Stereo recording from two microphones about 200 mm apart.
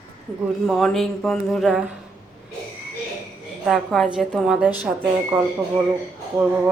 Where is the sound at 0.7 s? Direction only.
Centre (ahead or behind).